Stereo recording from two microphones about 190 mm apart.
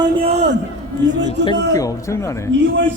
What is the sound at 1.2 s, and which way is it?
A man's voice, 25° left (ahead or behind).